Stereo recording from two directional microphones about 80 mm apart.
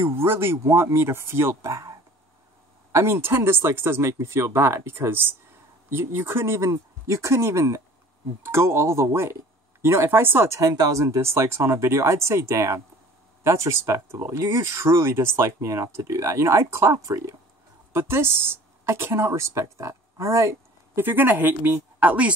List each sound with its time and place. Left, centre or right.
0.0 s speech: right
10.6 s speech: right
17.9 s speech: right
21.0 s speech: right